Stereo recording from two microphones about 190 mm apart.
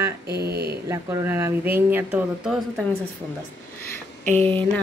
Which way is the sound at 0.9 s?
15° right (ahead or behind).